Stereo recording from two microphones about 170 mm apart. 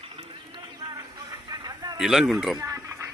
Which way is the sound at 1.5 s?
25° right (ahead or behind).